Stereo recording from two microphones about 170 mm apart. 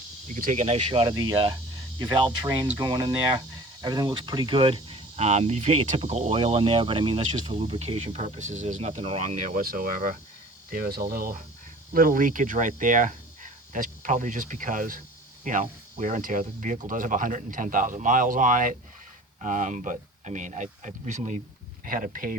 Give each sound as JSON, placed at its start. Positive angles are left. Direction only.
{"t": 0.3, "sound": "speech", "side_deg": -45}
{"t": 21.8, "sound": "speech", "side_deg": -55}